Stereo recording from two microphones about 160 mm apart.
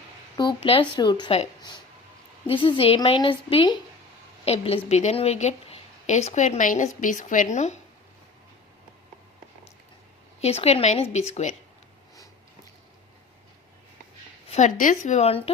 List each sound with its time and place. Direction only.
0.3 s speech: 30° left (ahead or behind)
2.5 s a woman's voice: 35° left (ahead or behind)
10.4 s a woman's voice: 40° left (ahead or behind)
14.5 s a woman's voice: 50° left (ahead or behind)